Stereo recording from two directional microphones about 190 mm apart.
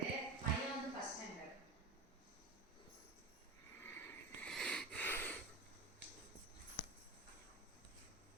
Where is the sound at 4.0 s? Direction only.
5° left (ahead or behind).